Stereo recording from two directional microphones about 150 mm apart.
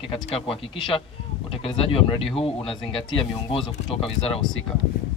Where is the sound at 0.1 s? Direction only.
40° left (ahead or behind).